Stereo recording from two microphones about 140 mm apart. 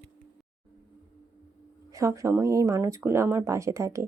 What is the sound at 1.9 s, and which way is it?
Speech, 20° right (ahead or behind).